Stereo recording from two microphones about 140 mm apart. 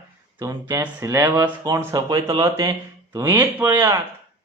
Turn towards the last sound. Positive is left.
turn(degrees=-15)  # may be behind; listen again after turning